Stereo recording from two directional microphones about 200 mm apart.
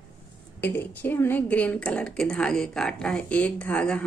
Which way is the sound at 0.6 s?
10° left (ahead or behind).